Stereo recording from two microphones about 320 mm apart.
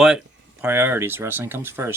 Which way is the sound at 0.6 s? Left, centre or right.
Centre.